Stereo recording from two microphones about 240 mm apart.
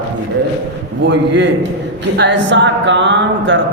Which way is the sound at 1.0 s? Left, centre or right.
Right.